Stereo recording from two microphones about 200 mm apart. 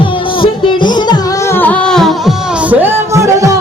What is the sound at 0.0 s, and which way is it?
Music, 25° left (ahead or behind).